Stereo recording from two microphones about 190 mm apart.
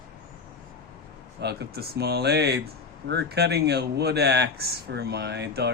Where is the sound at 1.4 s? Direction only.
60° right (ahead or behind).